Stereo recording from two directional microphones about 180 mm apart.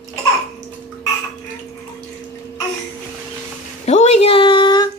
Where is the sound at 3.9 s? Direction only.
40° left (ahead or behind).